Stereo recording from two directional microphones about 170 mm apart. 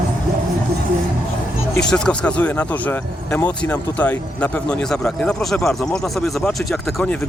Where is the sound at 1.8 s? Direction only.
5° left (ahead or behind).